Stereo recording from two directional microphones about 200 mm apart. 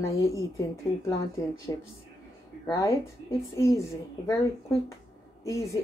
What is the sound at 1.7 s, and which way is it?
A woman's voice, 15° left (ahead or behind).